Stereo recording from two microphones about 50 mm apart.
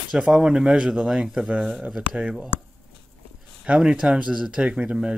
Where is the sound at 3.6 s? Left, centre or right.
Centre.